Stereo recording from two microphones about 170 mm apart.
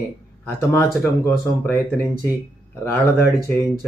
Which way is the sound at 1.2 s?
10° left (ahead or behind).